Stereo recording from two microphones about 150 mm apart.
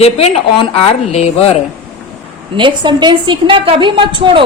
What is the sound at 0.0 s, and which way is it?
A woman's voice, 45° left (ahead or behind).